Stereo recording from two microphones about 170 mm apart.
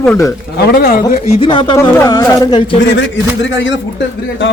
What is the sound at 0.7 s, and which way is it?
Speech, 60° left (ahead or behind).